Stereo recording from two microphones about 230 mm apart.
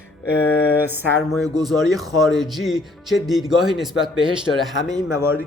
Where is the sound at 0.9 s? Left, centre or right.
Centre.